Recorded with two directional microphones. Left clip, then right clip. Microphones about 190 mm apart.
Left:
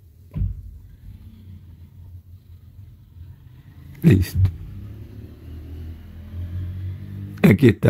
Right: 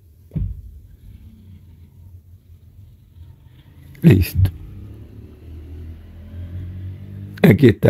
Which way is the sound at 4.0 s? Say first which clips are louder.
Right 3 dB; 20° right (ahead or behind).